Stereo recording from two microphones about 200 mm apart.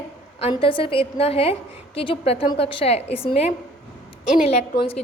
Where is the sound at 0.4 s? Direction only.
25° left (ahead or behind).